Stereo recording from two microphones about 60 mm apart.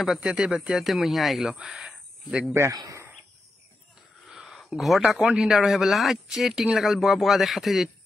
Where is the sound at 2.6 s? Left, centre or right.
Right.